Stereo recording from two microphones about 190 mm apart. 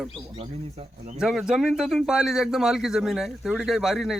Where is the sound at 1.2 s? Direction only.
Centre (ahead or behind).